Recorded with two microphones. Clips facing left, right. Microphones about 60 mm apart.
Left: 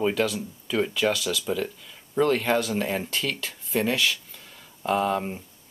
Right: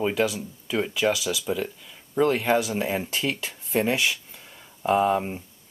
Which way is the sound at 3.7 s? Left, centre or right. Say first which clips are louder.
Right 1 dB; right.